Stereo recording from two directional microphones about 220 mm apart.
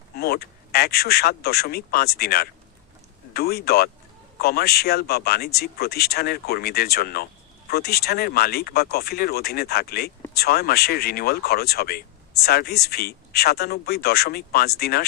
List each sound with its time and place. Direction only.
0.2 s speech: 45° left (ahead or behind)